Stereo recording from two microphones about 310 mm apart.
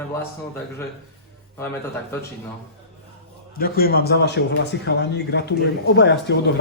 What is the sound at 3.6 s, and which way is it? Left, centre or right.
A man's voice, left.